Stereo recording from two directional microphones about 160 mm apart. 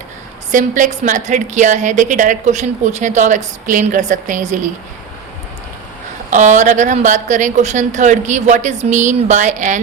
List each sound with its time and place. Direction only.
0.5 s a woman's voice: 55° right (ahead or behind)
6.3 s a woman's voice: 50° right (ahead or behind)